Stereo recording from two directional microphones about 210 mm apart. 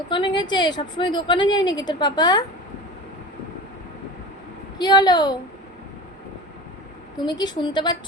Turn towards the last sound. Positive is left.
turn(degrees=20)  # may be behind; listen again after turning